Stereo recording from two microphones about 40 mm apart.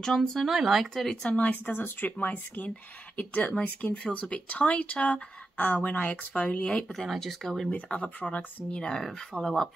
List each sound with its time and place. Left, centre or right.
0.0 s speech: centre
0.5 s speech: centre
0.9 s speech: centre
1.7 s speech: left
7.2 s speech: centre
7.9 s speech: left
8.6 s speech: left